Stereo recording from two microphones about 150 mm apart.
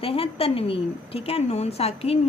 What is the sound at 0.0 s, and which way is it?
A woman's voice, 40° left (ahead or behind).